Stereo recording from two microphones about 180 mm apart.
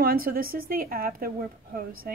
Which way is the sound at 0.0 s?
55° right (ahead or behind).